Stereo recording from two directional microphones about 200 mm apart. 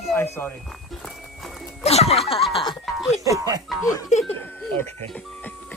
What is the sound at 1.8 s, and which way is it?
Speech, 30° left (ahead or behind).